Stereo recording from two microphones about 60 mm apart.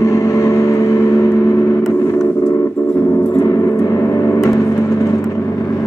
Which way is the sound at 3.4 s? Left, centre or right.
Left.